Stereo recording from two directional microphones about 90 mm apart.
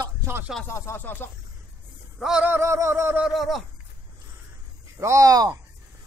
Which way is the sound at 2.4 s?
25° right (ahead or behind).